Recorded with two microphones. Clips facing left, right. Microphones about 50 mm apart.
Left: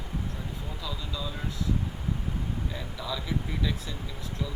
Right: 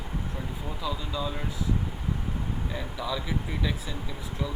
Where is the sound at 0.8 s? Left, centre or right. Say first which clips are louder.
Right 6 dB; right.